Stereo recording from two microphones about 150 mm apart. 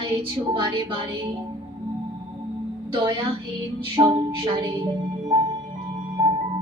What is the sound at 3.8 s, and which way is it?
Speech, 35° right (ahead or behind).